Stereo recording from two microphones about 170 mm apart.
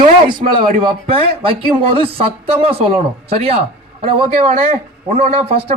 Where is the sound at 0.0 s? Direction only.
25° right (ahead or behind).